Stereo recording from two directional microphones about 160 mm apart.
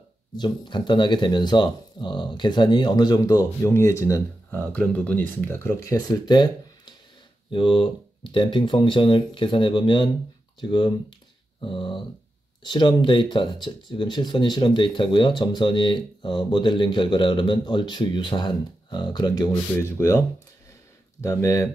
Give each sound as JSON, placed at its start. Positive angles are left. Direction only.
{"t": 0.4, "sound": "speech", "side_deg": 30}
{"t": 4.5, "sound": "speech", "side_deg": 10}
{"t": 5.9, "sound": "speech", "side_deg": 25}